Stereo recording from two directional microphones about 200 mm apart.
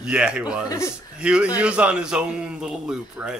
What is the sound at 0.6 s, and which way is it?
Speech, 15° left (ahead or behind).